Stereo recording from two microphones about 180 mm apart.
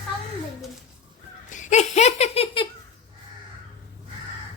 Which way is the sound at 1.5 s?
40° left (ahead or behind).